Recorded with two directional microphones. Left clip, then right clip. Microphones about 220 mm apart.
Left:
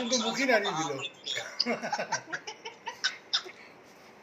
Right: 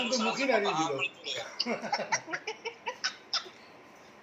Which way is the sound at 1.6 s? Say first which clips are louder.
Even; 20° left (ahead or behind).